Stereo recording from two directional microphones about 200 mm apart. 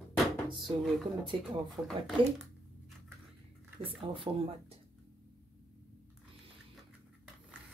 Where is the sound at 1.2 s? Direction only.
25° right (ahead or behind).